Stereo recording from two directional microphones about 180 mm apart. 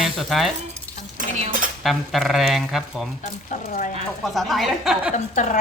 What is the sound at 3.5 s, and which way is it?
Speech, 45° left (ahead or behind).